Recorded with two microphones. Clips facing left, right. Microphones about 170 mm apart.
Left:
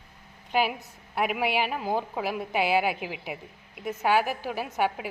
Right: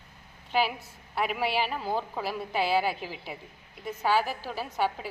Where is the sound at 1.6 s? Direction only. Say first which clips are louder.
Left 2 dB; 10° left (ahead or behind).